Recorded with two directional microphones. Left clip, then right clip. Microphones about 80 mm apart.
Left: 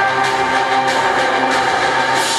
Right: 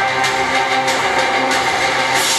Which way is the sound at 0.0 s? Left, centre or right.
Right.